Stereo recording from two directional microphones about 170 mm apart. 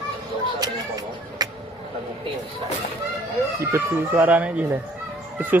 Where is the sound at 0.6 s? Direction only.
25° right (ahead or behind).